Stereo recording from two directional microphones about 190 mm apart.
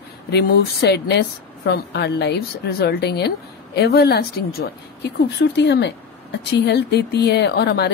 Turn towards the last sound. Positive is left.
turn(degrees=60)  # may be behind; listen again after turning